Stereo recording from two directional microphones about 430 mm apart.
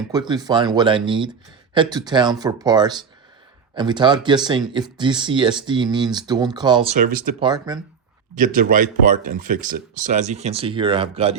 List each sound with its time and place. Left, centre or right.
0.1 s speech: centre